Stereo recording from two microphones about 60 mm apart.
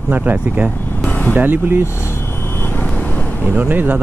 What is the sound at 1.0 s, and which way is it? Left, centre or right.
Vehicle, left.